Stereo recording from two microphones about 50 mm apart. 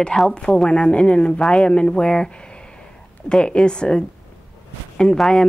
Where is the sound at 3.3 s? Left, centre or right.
Centre.